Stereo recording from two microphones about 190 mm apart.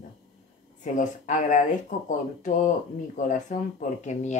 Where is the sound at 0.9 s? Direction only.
40° left (ahead or behind).